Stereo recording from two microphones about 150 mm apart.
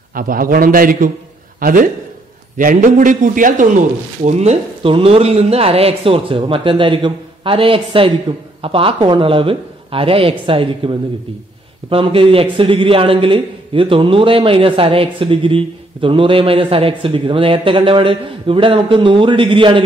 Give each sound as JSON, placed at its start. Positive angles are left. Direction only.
{"t": 0.1, "sound": "a man's voice", "side_deg": -70}